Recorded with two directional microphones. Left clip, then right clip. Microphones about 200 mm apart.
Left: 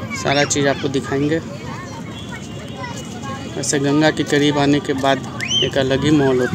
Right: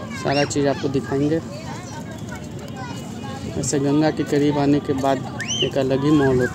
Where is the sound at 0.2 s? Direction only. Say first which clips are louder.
Left 3 dB; 10° right (ahead or behind).